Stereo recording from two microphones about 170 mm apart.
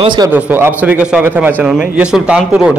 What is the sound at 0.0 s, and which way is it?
Speech, 25° right (ahead or behind).